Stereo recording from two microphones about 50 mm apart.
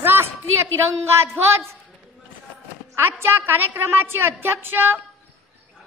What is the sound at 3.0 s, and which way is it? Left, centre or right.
A woman's voice, right.